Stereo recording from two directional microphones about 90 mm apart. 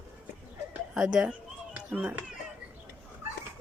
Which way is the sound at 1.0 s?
10° right (ahead or behind).